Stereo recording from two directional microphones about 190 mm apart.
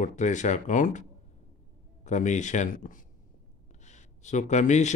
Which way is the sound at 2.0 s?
40° left (ahead or behind).